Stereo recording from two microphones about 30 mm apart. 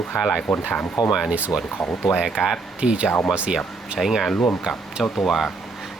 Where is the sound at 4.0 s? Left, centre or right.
Centre.